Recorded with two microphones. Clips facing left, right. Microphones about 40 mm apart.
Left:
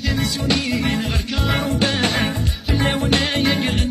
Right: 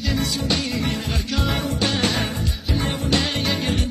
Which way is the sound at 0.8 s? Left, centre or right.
Left.